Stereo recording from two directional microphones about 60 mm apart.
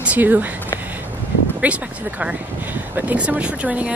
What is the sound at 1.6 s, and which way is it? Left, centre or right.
Speech, right.